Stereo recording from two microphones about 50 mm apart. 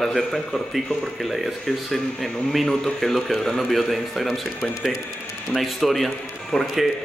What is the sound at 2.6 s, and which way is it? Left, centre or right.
A man's voice, centre.